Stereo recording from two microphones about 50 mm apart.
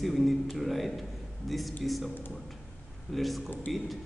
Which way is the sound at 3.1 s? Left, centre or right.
Centre.